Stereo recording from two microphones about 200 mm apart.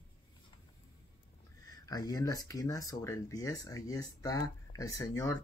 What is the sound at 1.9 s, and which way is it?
Speech, 20° left (ahead or behind).